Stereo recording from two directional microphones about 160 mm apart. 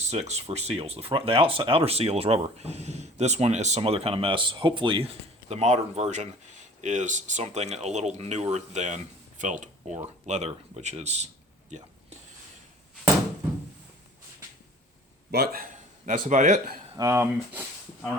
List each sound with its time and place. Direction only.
0.0 s speech: 45° right (ahead or behind)
15.3 s speech: 75° right (ahead or behind); by 16.7 s 50° right (ahead or behind)
16.9 s speech: 20° right (ahead or behind)